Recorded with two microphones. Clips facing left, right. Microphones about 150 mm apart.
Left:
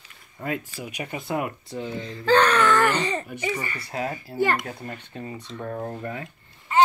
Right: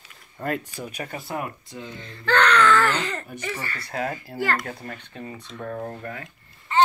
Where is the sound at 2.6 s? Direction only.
15° left (ahead or behind).